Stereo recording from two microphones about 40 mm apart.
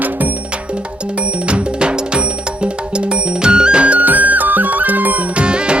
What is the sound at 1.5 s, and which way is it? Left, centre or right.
Music, right.